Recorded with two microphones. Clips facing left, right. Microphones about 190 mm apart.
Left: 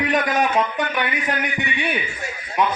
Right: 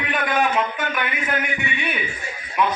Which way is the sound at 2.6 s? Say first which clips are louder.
Even; 35° left (ahead or behind).